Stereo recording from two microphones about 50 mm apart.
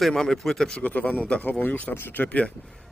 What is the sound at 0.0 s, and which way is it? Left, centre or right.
Speech, centre.